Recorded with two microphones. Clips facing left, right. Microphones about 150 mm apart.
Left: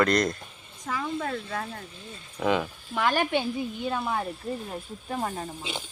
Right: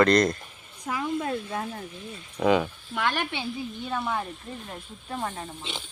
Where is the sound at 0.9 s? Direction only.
10° right (ahead or behind).